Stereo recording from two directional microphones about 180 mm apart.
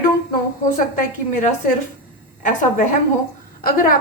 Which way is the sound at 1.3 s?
45° left (ahead or behind).